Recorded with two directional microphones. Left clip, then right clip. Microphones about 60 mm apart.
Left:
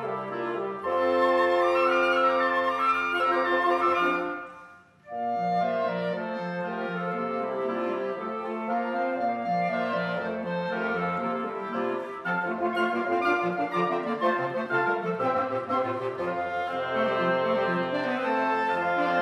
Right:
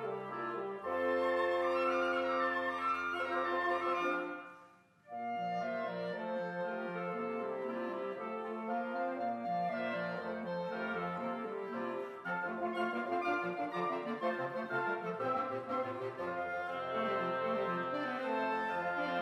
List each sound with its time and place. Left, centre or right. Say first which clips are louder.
0.9 s music: left 10 dB; centre
1.2 s flute: left 10 dB; right
13.8 s music: left 10 dB; centre
16.9 s music: left 9 dB; centre
17.3 s music: left 10 dB; right
17.6 s music: left 9 dB; centre